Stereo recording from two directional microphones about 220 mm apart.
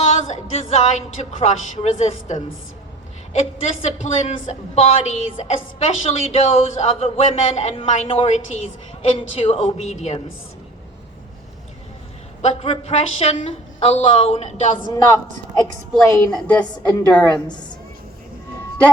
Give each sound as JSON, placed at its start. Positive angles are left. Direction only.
{"t": 0.0, "sound": "a woman's voice", "side_deg": 30}
{"t": 12.4, "sound": "a woman's voice", "side_deg": 30}
{"t": 15.5, "sound": "a woman's voice", "side_deg": 15}